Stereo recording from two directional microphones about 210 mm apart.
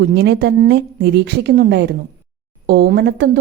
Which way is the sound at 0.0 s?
50° right (ahead or behind).